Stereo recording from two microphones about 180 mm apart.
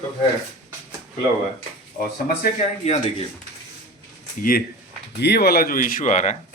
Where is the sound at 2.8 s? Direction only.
35° left (ahead or behind).